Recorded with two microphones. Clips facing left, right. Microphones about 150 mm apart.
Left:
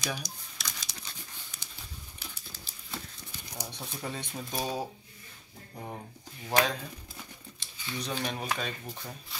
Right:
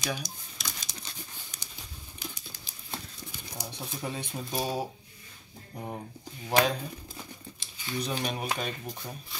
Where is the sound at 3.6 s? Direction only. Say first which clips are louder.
Right 2 dB; 10° right (ahead or behind).